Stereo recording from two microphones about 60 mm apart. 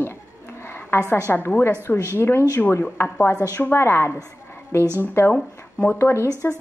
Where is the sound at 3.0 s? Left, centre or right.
Left.